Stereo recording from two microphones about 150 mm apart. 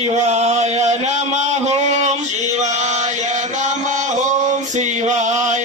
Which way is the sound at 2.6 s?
50° right (ahead or behind).